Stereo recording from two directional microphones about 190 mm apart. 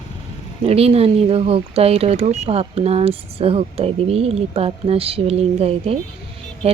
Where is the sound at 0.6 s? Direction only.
30° right (ahead or behind).